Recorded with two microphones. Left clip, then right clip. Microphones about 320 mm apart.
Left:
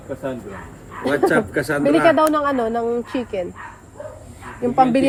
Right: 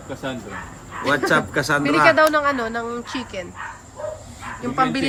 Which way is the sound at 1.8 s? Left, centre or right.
Centre.